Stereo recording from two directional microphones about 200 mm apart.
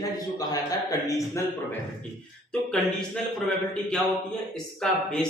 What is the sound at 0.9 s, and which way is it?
Speech, 15° left (ahead or behind).